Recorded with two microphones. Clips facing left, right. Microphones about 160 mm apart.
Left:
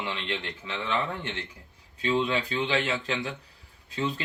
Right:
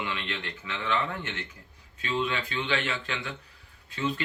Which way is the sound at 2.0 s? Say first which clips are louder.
Left 4 dB; 30° left (ahead or behind).